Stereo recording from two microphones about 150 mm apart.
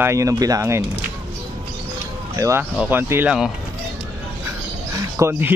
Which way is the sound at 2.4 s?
20° right (ahead or behind).